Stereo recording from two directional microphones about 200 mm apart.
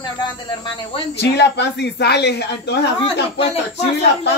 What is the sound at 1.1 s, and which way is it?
Speech, 60° left (ahead or behind).